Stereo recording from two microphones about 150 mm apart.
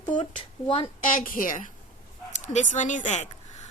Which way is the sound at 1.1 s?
65° left (ahead or behind).